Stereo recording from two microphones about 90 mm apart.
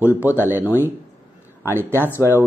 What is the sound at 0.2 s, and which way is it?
Speech, 20° right (ahead or behind).